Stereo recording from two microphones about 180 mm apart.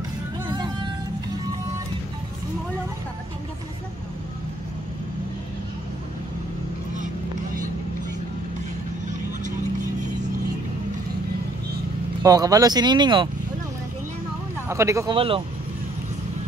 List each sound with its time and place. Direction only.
0.5 s music: 25° right (ahead or behind)
12.2 s speech: 20° right (ahead or behind)
14.7 s speech: 15° right (ahead or behind)
15.1 s speech: 30° right (ahead or behind)